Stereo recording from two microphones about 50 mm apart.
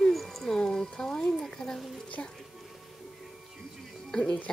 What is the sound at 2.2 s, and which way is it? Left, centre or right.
Speech, left.